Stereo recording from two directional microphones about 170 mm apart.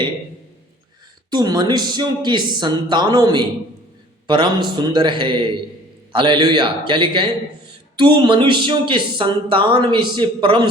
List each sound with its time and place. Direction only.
1.3 s speech: 25° right (ahead or behind)